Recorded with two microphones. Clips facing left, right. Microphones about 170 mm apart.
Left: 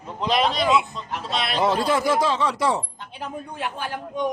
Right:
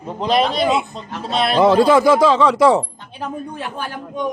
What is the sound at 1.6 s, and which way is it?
Speech, 90° right.